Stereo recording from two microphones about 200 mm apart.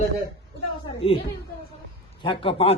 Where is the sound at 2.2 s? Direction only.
25° left (ahead or behind).